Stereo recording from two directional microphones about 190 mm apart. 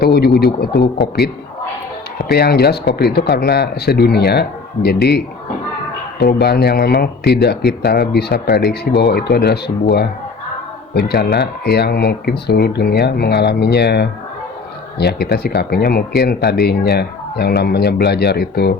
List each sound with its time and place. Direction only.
0.0 s speech: 55° left (ahead or behind)